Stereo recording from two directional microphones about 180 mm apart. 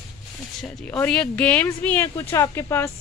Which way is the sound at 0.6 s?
5° left (ahead or behind).